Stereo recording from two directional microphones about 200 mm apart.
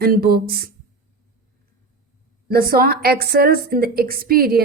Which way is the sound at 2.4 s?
50° right (ahead or behind).